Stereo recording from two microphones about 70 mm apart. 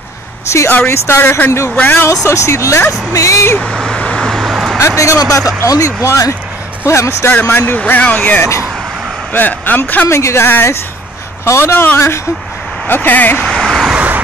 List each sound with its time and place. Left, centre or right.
0.5 s a man's voice: left
2.2 s a man's voice: left
3.5 s vehicle: centre
4.4 s vehicle: centre
4.7 s a man's voice: left
6.8 s a man's voice: left
7.4 s speech: left
9.3 s speech: left
10.0 s speech: left
13.4 s vehicle: centre
13.9 s vehicle: right